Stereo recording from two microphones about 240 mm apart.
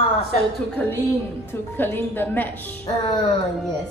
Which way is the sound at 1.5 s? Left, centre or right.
Centre.